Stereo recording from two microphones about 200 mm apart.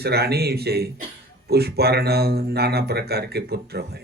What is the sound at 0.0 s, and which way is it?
Speech, 55° right (ahead or behind).